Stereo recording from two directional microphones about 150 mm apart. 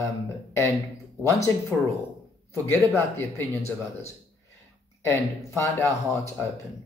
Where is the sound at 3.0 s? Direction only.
15° left (ahead or behind).